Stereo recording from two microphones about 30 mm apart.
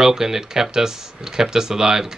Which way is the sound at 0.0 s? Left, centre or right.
Centre.